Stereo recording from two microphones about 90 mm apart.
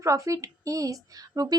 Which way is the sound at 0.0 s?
35° right (ahead or behind).